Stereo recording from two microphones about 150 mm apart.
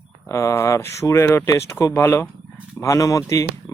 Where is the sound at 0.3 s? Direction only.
20° left (ahead or behind).